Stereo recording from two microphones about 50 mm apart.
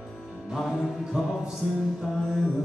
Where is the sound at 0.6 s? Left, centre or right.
Centre.